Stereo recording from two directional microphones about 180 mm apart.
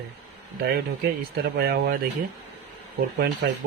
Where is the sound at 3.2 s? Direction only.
70° right (ahead or behind).